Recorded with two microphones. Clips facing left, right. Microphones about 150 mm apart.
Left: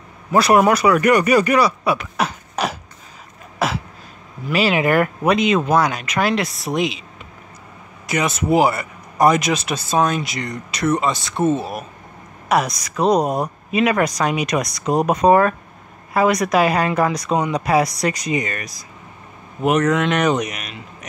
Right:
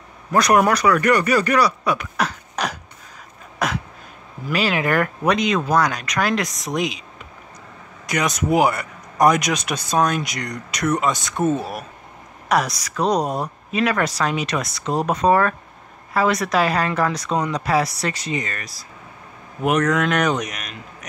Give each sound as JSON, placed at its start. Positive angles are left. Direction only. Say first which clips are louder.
{"t": 0.3, "sound": "speech", "louder": "left 2 dB", "side_deg": 5}
{"t": 3.5, "sound": "a sound", "louder": "left 2 dB", "side_deg": 5}
{"t": 4.5, "sound": "speech", "louder": "left 3 dB", "side_deg": 5}
{"t": 8.1, "sound": "speech", "louder": "left 2 dB", "side_deg": 5}
{"t": 19.6, "sound": "speech", "louder": "left 2 dB", "side_deg": 5}